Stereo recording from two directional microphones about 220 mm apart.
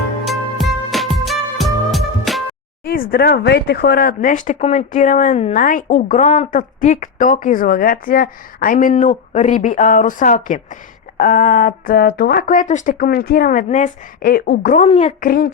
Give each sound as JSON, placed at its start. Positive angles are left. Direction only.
{"t": 0.3, "sound": "music", "side_deg": 0}
{"t": 2.8, "sound": "speech", "side_deg": 40}
{"t": 14.8, "sound": "a woman's voice", "side_deg": 25}
{"t": 15.2, "sound": "speech", "side_deg": 40}